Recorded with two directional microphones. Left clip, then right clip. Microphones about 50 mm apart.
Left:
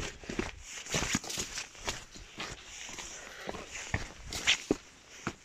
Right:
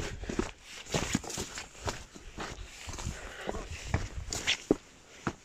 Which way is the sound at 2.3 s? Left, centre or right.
Left.